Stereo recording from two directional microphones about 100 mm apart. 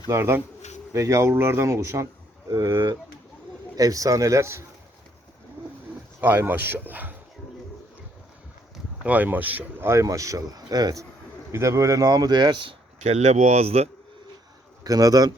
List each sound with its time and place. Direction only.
0.1 s speech: 25° right (ahead or behind)
6.1 s speech: 20° right (ahead or behind)
9.0 s speech: 15° right (ahead or behind); by 11.0 s 40° right (ahead or behind)
11.5 s speech: 30° right (ahead or behind); by 13.9 s 90° right
14.8 s speech: 35° right (ahead or behind)